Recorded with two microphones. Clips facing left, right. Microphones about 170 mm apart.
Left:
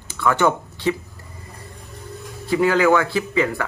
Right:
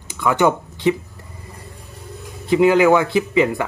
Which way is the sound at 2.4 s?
20° right (ahead or behind).